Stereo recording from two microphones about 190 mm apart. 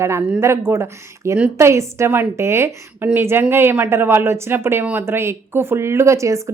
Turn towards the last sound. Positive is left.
turn(degrees=-15)  # may be behind; listen again after turning